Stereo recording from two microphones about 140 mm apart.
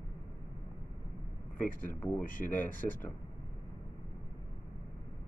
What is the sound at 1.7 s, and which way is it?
Speech, 75° left (ahead or behind).